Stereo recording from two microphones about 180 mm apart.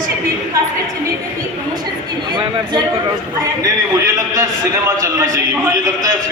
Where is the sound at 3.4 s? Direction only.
20° right (ahead or behind).